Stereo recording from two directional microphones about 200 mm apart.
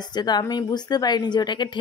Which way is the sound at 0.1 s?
20° left (ahead or behind).